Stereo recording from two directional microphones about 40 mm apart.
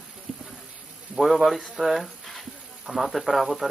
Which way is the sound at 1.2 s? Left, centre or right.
Centre.